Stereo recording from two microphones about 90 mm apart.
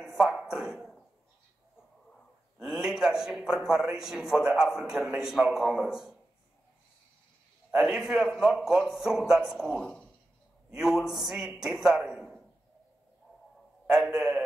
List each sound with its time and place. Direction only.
0.0 s a sound: 5° right (ahead or behind)
2.6 s a man's voice: 5° right (ahead or behind)
7.7 s a man's voice: 5° right (ahead or behind)
13.9 s a man's voice: centre (ahead or behind)